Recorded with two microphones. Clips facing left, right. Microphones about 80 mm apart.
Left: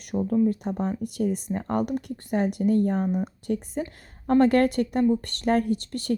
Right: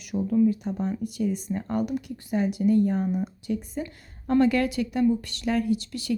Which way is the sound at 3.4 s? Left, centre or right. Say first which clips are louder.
Left 2 dB; left.